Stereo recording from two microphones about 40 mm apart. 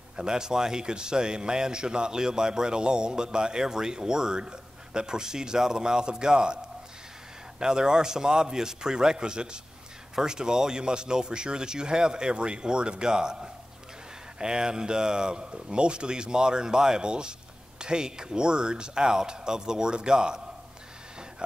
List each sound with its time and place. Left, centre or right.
0.1 s a man's voice: centre